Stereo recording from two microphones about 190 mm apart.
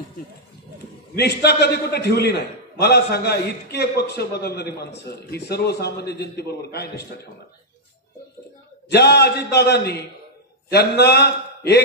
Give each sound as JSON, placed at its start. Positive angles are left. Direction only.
{"t": 1.1, "sound": "a man's voice", "side_deg": 60}
{"t": 8.9, "sound": "a man's voice", "side_deg": 60}